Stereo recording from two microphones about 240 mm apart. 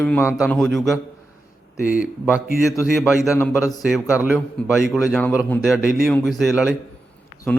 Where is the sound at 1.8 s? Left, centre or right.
Left.